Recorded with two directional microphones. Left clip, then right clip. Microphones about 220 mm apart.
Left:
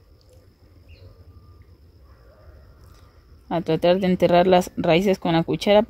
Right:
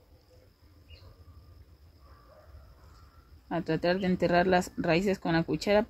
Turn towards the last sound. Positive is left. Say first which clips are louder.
# left 9 dB
turn(degrees=40)  # may be behind; listen again after turning